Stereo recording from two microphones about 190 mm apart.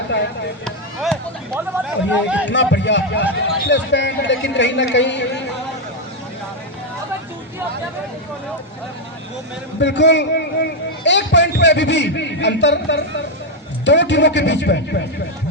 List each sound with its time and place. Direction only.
0.6 s a sound: centre (ahead or behind)
1.5 s speech: 10° right (ahead or behind)
2.5 s a man's voice: 65° left (ahead or behind)
9.8 s a man's voice: 65° left (ahead or behind)